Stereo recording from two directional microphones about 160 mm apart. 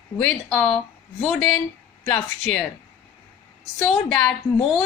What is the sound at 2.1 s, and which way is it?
Speech, 10° left (ahead or behind).